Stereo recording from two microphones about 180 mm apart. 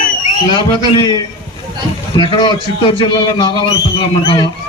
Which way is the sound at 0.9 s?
20° left (ahead or behind).